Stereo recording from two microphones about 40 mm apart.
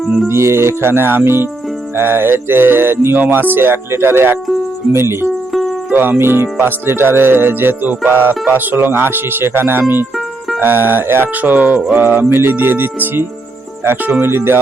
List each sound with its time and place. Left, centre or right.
0.3 s speech: right
3.2 s speech: right
3.5 s speech: right
5.9 s speech: right
6.1 s speech: right
10.6 s speech: right
11.3 s speech: right
12.0 s speech: right